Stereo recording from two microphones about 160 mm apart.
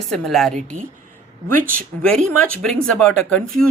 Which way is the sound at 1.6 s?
60° right (ahead or behind).